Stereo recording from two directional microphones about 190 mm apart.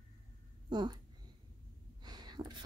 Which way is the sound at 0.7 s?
25° right (ahead or behind).